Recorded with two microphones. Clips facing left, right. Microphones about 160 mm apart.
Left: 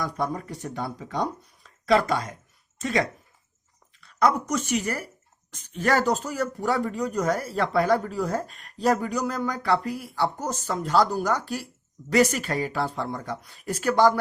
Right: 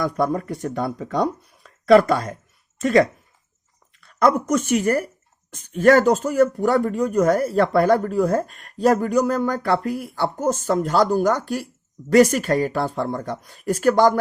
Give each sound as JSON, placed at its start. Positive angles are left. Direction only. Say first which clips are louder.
{"t": 0.0, "sound": "speech", "louder": "right 7 dB", "side_deg": -60}